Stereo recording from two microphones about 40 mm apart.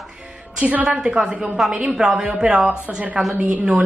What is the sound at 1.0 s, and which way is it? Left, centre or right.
A woman's voice, right.